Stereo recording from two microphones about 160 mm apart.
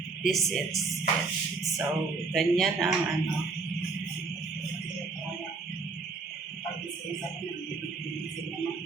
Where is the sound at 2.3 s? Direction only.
Centre (ahead or behind).